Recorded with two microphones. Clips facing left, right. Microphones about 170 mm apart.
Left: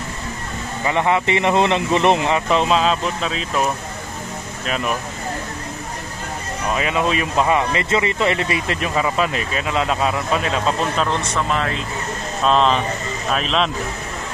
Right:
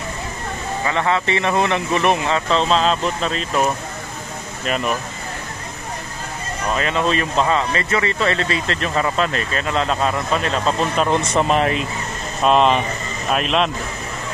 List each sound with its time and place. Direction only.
0.8 s speech: 15° left (ahead or behind); by 4.9 s centre (ahead or behind)
6.7 s speech: 5° left (ahead or behind)
11.1 s speech: 20° right (ahead or behind)
12.4 s speech: 10° right (ahead or behind)